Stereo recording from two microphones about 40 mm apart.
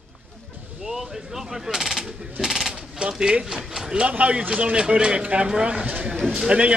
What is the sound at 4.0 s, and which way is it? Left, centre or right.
Speech, right.